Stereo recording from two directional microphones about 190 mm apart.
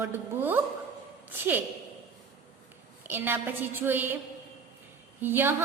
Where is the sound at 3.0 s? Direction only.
10° right (ahead or behind).